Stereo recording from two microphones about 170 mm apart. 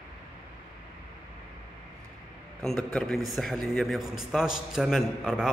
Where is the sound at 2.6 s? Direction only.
5° left (ahead or behind).